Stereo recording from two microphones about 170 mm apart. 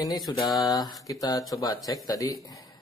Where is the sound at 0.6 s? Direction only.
20° left (ahead or behind).